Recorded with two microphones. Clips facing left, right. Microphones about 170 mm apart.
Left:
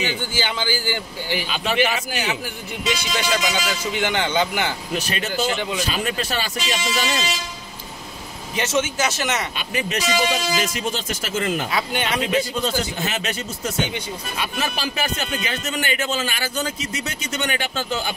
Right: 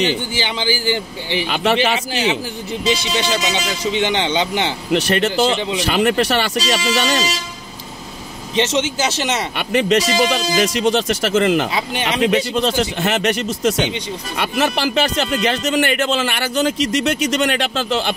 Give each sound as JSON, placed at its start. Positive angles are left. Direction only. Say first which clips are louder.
{"t": 0.3, "sound": "speech", "louder": "right 3 dB", "side_deg": -20}
{"t": 1.5, "sound": "speech", "louder": "right 5 dB", "side_deg": -75}
{"t": 2.8, "sound": "speech", "louder": "right 5 dB", "side_deg": -30}
{"t": 4.9, "sound": "speech", "louder": "right 11 dB", "side_deg": -75}
{"t": 8.5, "sound": "speech", "louder": "right 4 dB", "side_deg": -25}
{"t": 9.6, "sound": "speech", "louder": "right 9 dB", "side_deg": -65}